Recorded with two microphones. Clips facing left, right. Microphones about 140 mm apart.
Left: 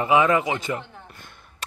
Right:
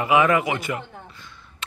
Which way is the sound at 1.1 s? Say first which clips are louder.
Right 1 dB; 55° left (ahead or behind).